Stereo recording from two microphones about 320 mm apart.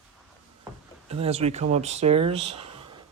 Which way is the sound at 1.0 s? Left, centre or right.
Centre.